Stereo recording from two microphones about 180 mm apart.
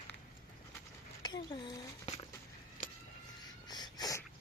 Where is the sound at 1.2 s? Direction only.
25° left (ahead or behind).